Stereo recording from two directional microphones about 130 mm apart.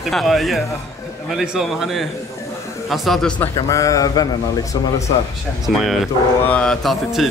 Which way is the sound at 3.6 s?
25° left (ahead or behind).